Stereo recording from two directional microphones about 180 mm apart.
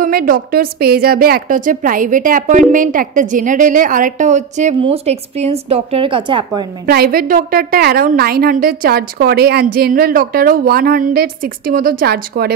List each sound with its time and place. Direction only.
0.0 s a woman's voice: 55° right (ahead or behind); by 6.7 s 25° right (ahead or behind)
6.9 s a woman's voice: 55° right (ahead or behind)